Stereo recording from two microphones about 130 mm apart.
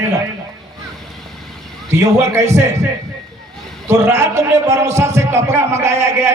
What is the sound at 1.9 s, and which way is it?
Speech, 25° right (ahead or behind).